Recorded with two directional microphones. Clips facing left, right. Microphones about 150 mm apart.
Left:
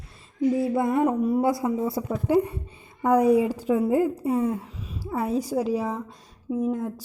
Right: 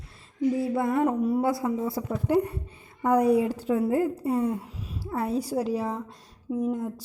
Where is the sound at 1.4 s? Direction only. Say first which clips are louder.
Left 2 dB; 20° left (ahead or behind).